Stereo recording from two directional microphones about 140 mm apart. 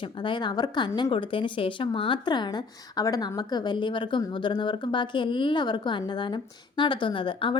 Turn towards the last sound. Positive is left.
turn(degrees=35)  # may be behind; listen again after turning